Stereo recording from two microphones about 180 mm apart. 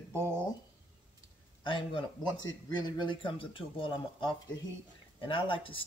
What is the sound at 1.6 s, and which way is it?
Speech, 25° left (ahead or behind).